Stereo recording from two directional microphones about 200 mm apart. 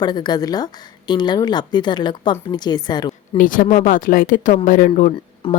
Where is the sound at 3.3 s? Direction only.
40° left (ahead or behind).